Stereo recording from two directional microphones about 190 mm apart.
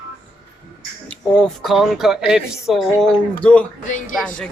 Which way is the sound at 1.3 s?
Centre (ahead or behind).